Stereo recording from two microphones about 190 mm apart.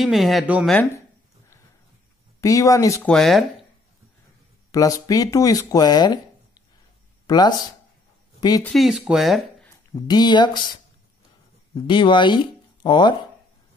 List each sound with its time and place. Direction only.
0.0 s speech: centre (ahead or behind)
2.4 s speech: 15° left (ahead or behind)
3.1 s speech: centre (ahead or behind)
4.6 s speech: 20° left (ahead or behind)
7.2 s speech: 20° left (ahead or behind)
8.6 s speech: centre (ahead or behind)
9.9 s speech: 20° left (ahead or behind)
11.7 s speech: 25° left (ahead or behind)